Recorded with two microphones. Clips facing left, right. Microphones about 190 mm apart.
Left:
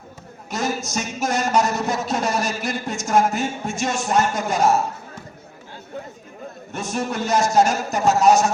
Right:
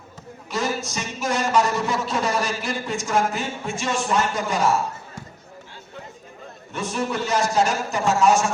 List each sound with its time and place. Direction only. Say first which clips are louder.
0.5 s a man's voice: left 1 dB; 45° left (ahead or behind)
6.7 s a man's voice: even; 45° left (ahead or behind)